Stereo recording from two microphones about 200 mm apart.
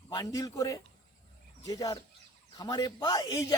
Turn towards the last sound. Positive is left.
turn(degrees=20)  # may be behind; listen again after turning